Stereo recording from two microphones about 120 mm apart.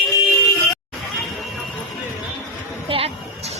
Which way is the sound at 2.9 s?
50° right (ahead or behind).